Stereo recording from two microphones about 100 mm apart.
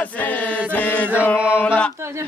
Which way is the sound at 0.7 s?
15° left (ahead or behind).